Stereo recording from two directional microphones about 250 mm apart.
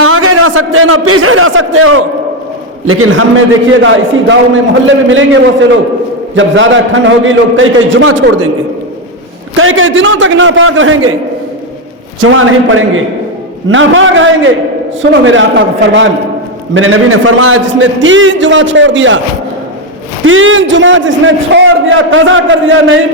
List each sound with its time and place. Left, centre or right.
0.0 s a sound: right
2.8 s a man's voice: right
9.6 s a man's voice: right
12.2 s a man's voice: right
20.2 s a man's voice: right